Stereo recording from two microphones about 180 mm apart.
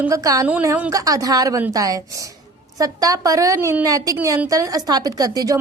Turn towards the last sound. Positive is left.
turn(degrees=-20)  # may be behind; listen again after turning